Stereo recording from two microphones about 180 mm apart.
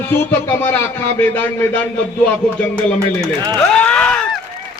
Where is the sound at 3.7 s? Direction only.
5° left (ahead or behind).